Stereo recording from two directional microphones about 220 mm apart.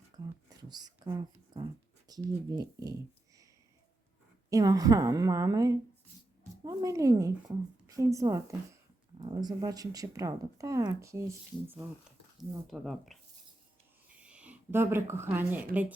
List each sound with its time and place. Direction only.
0.5 s a sound: 20° right (ahead or behind)
2.0 s speech: 15° right (ahead or behind)
4.4 s speech: 15° right (ahead or behind)
12.4 s speech: centre (ahead or behind)
14.2 s speech: 5° right (ahead or behind)